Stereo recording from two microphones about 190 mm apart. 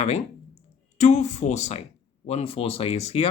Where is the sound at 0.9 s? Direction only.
35° left (ahead or behind).